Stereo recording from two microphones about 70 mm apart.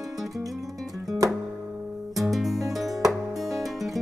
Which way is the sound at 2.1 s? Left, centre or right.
Centre.